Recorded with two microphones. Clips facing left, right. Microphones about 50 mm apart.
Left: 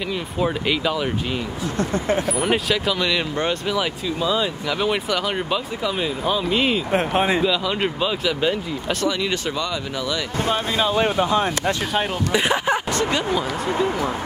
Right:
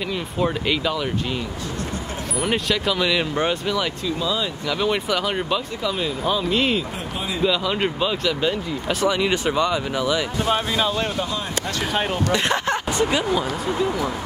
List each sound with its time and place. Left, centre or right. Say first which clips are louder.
0.4 s speech: even; centre
2.3 s speech: left 2 dB; centre
4.2 s speech: left 4 dB; centre
4.6 s speech: right 4 dB; centre
6.9 s speech: left 9 dB; left
7.4 s speech: even; centre
9.0 s speech: right 4 dB; centre
10.8 s speech: left 3 dB; centre
12.3 s speech: left 3 dB; centre
13.7 s speech: left 2 dB; left